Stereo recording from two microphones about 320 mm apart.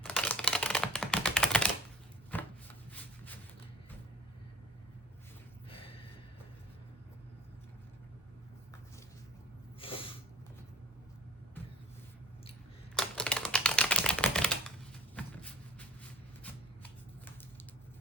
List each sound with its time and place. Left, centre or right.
0.0 s typing: centre
2.3 s shuffling cards: centre
5.7 s gasp: centre
9.8 s a sound: centre
13.0 s typewriter: centre
15.1 s a sound: centre